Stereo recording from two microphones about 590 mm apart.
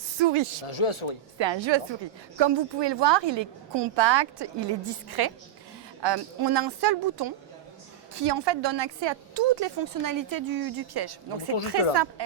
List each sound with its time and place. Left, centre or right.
0.2 s a woman's voice: right
0.7 s speech: left
1.4 s a woman's voice: right